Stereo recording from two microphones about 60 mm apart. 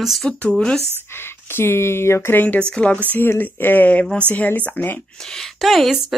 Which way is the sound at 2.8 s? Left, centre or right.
Left.